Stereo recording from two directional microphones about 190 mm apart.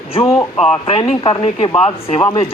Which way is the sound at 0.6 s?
30° left (ahead or behind).